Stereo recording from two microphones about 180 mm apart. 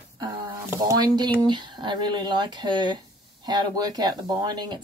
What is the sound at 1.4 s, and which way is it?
Speech, 25° right (ahead or behind).